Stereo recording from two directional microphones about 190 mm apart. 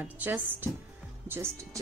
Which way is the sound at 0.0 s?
10° right (ahead or behind).